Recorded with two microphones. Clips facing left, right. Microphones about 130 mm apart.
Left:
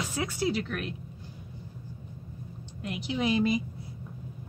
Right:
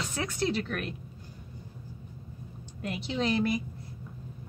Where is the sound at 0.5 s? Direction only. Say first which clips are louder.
Even; centre (ahead or behind).